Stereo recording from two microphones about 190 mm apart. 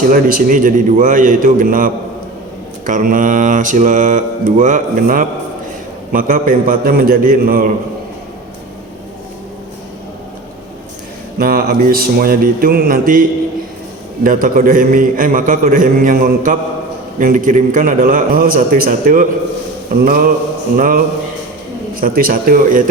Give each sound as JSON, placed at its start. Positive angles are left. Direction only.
{"t": 0.0, "sound": "mantra", "side_deg": -45}
{"t": 11.3, "sound": "mantra", "side_deg": -50}
{"t": 14.3, "sound": "mantra", "side_deg": -45}
{"t": 22.0, "sound": "mantra", "side_deg": -50}